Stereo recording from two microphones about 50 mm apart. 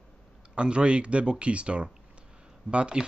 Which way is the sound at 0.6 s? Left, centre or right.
Right.